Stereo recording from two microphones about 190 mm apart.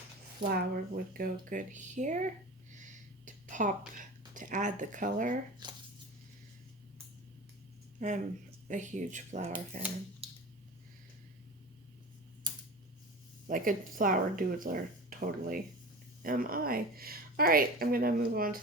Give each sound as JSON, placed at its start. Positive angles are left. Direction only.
{"t": 0.4, "sound": "a woman's voice", "side_deg": -55}
{"t": 2.7, "sound": "a sound", "side_deg": -40}
{"t": 4.4, "sound": "speech", "side_deg": -40}
{"t": 5.6, "sound": "speech", "side_deg": -25}
{"t": 7.9, "sound": "speech", "side_deg": -40}
{"t": 13.5, "sound": "a woman's voice", "side_deg": -45}